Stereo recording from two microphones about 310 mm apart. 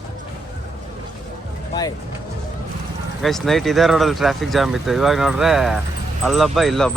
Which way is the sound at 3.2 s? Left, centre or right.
Centre.